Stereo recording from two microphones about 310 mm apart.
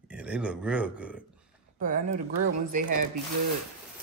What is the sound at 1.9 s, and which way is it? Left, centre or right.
Speech, right.